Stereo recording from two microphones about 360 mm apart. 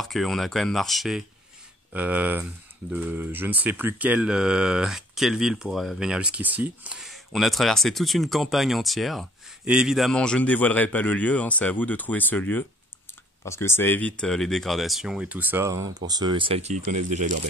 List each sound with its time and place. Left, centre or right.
0.0 s speech: centre; by 17.4 s right